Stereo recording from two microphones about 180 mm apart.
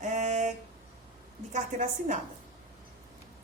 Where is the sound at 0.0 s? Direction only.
40° right (ahead or behind).